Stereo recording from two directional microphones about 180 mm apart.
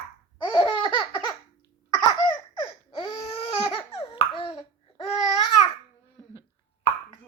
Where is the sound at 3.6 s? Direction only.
30° left (ahead or behind).